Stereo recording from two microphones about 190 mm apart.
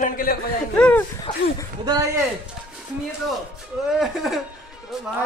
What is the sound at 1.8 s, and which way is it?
Speech, 20° right (ahead or behind).